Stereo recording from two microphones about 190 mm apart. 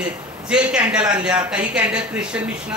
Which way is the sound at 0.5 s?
5° right (ahead or behind).